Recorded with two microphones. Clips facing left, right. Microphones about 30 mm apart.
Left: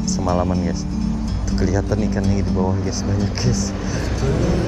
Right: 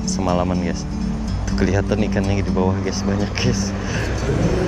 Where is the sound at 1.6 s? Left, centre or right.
Centre.